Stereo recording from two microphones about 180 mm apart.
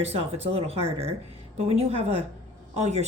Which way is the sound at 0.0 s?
35° right (ahead or behind).